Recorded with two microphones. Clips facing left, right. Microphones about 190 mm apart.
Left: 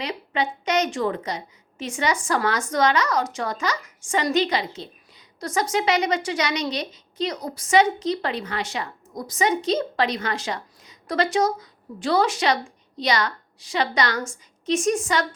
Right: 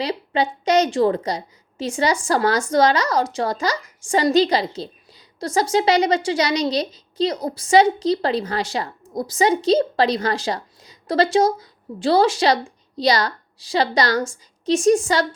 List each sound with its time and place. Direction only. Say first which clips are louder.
0.0 s a woman's voice: right 5 dB; 35° right (ahead or behind)